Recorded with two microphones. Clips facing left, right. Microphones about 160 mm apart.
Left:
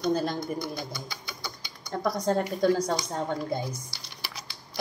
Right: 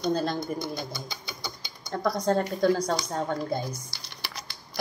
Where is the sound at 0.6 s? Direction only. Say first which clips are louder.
Right 1 dB; 25° right (ahead or behind).